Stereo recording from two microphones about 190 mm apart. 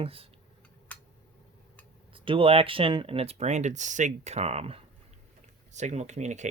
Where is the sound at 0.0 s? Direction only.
30° right (ahead or behind).